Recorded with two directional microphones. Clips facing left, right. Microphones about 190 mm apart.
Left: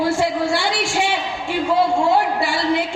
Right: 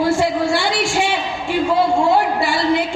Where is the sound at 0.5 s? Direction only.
45° right (ahead or behind).